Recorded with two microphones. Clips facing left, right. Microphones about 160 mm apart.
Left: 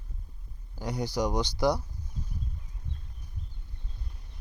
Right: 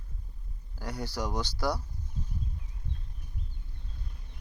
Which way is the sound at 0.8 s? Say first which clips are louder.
Left 5 dB; 15° left (ahead or behind).